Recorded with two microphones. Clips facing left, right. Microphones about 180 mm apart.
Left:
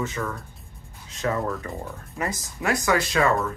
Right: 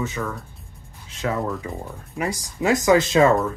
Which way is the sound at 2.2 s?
15° right (ahead or behind).